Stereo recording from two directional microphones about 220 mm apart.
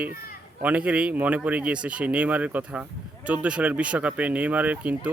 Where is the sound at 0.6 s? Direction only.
5° right (ahead or behind).